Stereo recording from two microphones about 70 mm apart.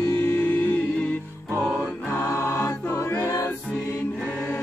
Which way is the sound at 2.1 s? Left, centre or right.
Left.